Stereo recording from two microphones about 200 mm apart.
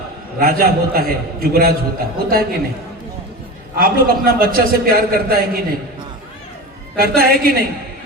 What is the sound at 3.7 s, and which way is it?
A man's voice, 45° right (ahead or behind).